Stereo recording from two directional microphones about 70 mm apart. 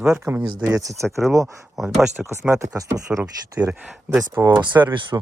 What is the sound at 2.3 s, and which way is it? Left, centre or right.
Speech, right.